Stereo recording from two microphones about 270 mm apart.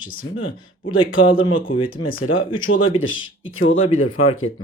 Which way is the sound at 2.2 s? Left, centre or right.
Left.